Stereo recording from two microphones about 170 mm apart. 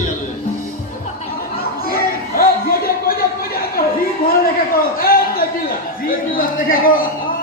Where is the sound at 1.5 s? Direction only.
60° left (ahead or behind).